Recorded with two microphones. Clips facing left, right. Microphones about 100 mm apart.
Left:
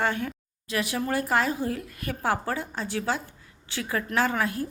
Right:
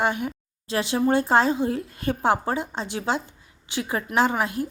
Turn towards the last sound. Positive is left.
turn(degrees=-20)  # may be behind; listen again after turning